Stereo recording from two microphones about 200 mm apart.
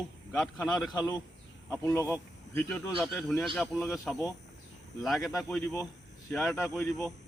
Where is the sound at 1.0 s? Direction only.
20° left (ahead or behind).